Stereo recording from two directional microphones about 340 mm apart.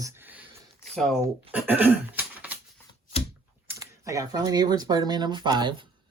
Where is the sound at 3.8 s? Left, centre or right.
Centre.